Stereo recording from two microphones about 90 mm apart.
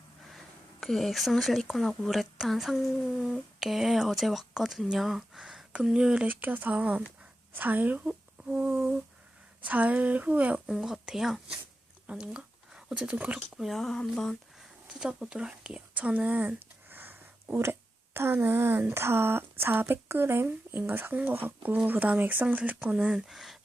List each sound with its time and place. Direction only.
0.3 s speech: centre (ahead or behind); by 13.4 s 15° right (ahead or behind)
13.6 s speech: centre (ahead or behind)
14.6 s speech: 5° right (ahead or behind)